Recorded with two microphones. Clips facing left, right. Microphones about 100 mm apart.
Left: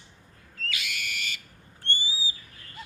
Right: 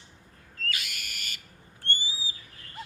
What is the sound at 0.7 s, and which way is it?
Owl, 45° right (ahead or behind).